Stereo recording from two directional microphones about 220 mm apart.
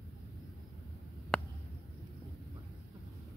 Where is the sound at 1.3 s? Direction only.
5° left (ahead or behind).